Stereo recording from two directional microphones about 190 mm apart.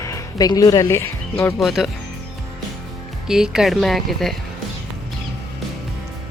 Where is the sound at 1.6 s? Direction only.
Centre (ahead or behind).